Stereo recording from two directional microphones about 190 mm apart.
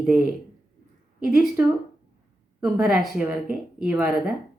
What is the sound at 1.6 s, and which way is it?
A woman's voice, 10° right (ahead or behind).